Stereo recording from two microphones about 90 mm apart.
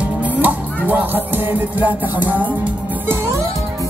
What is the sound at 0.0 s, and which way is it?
Music, 15° right (ahead or behind).